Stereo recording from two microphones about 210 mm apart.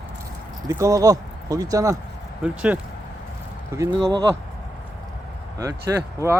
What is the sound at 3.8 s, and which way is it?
Speech, 15° right (ahead or behind).